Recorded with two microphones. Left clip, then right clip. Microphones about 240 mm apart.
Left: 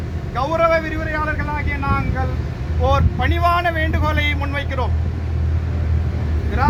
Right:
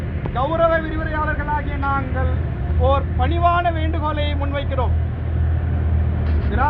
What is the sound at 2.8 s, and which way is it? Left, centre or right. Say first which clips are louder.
Speech: left 1 dB; left.